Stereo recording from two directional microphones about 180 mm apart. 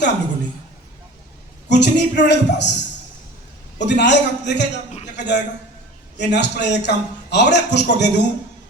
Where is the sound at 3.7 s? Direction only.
75° left (ahead or behind).